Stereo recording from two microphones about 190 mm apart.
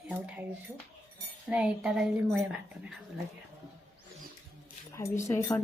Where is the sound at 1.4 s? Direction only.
5° right (ahead or behind).